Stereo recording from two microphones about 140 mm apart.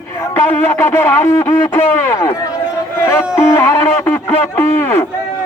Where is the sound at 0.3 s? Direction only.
15° left (ahead or behind).